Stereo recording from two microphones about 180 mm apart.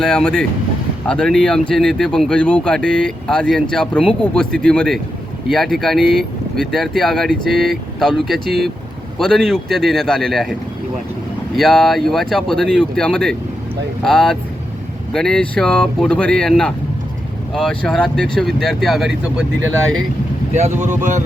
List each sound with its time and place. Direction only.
0.0 s speech: 5° left (ahead or behind)
11.5 s speech: centre (ahead or behind)
20.5 s speech: 40° right (ahead or behind)